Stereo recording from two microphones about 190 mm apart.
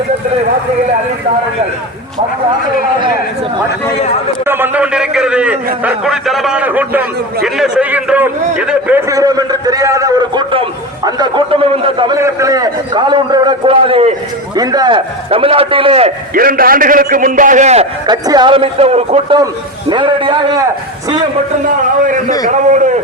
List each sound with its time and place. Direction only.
4.4 s a man's voice: 10° right (ahead or behind); by 16.1 s 30° right (ahead or behind)
16.3 s a man's voice: 50° right (ahead or behind)
18.0 s a man's voice: 20° right (ahead or behind)
22.4 s a man's voice: 40° right (ahead or behind)